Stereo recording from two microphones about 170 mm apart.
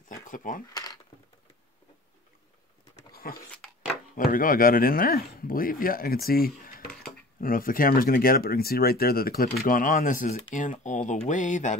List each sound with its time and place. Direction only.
0.3 s speech: 50° left (ahead or behind)
3.1 s dog: 60° left (ahead or behind)
4.2 s speech: 55° left (ahead or behind)